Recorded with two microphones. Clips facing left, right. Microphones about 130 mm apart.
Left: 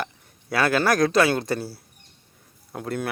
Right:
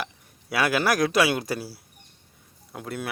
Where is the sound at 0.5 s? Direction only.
10° right (ahead or behind).